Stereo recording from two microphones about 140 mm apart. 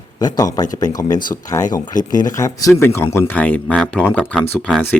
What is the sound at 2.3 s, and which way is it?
Speech, 25° left (ahead or behind).